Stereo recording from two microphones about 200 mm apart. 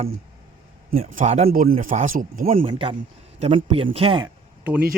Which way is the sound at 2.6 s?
25° right (ahead or behind).